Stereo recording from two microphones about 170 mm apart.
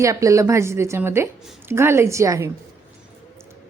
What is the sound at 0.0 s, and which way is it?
A woman's voice, 20° right (ahead or behind).